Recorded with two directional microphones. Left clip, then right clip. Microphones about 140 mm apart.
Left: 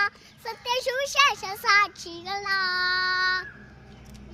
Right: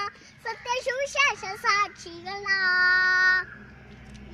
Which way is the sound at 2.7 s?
60° right (ahead or behind).